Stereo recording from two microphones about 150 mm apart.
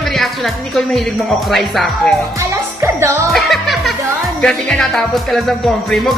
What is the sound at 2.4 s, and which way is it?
Music, 20° right (ahead or behind).